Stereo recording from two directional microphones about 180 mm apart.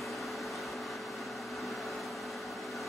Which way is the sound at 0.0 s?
Centre (ahead or behind).